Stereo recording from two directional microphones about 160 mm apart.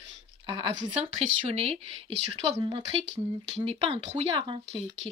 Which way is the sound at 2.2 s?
90° right.